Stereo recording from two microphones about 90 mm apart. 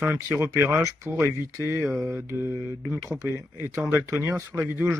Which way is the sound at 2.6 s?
20° right (ahead or behind).